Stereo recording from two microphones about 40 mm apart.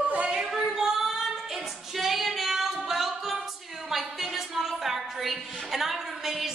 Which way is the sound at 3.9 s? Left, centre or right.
Centre.